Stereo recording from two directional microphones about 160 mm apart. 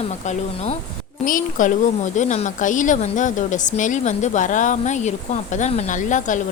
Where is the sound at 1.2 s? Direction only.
55° left (ahead or behind).